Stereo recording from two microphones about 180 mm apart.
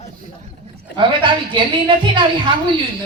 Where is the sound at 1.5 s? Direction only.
25° right (ahead or behind).